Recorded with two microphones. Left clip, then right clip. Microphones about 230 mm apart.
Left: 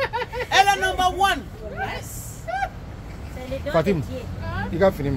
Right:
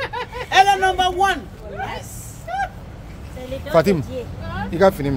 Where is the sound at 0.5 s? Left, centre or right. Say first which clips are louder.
Right 4 dB; centre.